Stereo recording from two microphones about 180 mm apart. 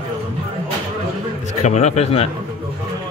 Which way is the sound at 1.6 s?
40° left (ahead or behind).